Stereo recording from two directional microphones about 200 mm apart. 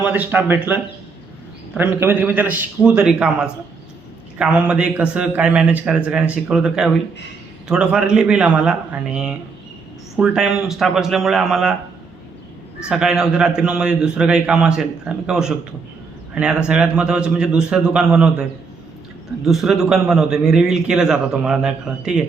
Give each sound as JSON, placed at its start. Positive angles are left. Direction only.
{"t": 0.0, "sound": "a man's voice", "side_deg": -10}
{"t": 12.9, "sound": "a man's voice", "side_deg": -5}
{"t": 19.5, "sound": "a man's voice", "side_deg": 0}